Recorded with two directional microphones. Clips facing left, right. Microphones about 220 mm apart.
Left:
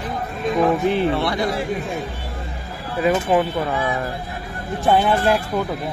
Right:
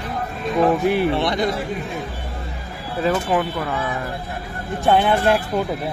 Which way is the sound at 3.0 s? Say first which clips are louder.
Left 2 dB; 20° left (ahead or behind).